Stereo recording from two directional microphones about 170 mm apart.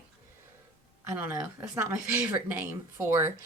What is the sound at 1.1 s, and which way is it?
Speech, 10° right (ahead or behind).